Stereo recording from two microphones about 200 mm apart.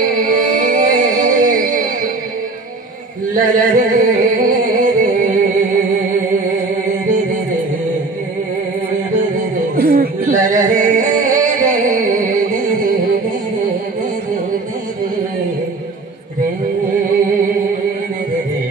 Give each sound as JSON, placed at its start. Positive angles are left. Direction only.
{"t": 0.1, "sound": "music", "side_deg": -40}
{"t": 3.3, "sound": "music", "side_deg": -40}
{"t": 7.1, "sound": "music", "side_deg": -40}
{"t": 9.1, "sound": "music", "side_deg": -40}